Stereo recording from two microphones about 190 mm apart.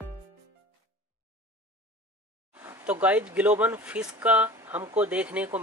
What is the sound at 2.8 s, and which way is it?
Speech, 10° right (ahead or behind).